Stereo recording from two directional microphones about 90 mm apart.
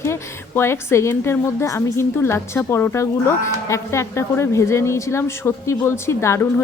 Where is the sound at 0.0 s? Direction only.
30° left (ahead or behind).